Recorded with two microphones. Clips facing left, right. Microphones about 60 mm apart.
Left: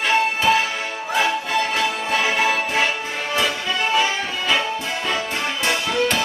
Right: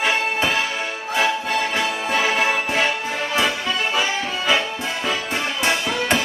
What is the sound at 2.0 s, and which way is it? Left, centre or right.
Music, centre.